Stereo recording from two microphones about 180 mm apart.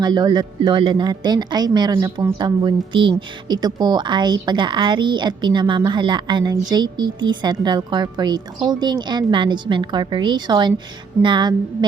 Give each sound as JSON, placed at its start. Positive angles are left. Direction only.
{"t": 0.0, "sound": "a woman's voice", "side_deg": -25}